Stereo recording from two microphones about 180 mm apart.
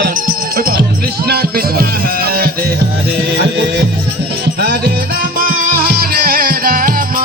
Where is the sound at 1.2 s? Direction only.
60° right (ahead or behind).